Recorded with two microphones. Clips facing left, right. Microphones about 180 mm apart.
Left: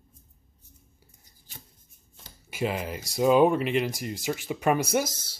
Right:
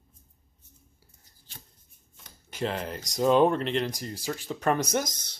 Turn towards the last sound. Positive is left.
turn(degrees=5)  # may be behind; listen again after turning